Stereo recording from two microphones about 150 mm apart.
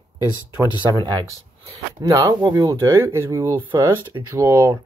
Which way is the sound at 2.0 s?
25° right (ahead or behind).